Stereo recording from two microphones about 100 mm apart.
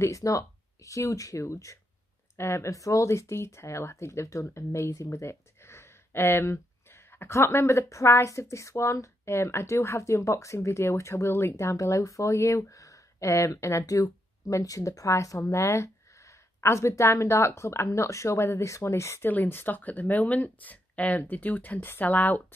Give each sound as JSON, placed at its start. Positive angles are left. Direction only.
{"t": 0.0, "sound": "speech", "side_deg": 35}